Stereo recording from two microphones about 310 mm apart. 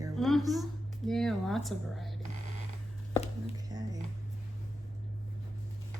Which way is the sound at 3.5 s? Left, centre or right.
Centre.